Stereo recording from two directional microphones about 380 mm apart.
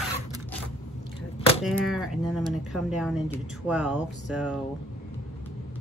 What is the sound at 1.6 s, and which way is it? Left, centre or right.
Speech, centre.